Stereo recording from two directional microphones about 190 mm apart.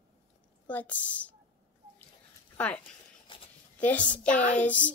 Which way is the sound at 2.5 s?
5° left (ahead or behind).